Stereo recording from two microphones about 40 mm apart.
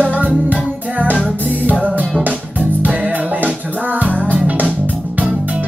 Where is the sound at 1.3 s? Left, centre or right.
Left.